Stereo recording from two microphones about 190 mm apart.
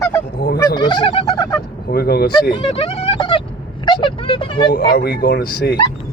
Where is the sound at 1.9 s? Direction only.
55° left (ahead or behind).